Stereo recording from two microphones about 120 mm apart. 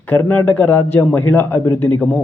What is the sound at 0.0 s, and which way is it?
A man's voice, 15° left (ahead or behind).